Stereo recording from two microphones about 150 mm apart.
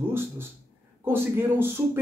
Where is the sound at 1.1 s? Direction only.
15° right (ahead or behind).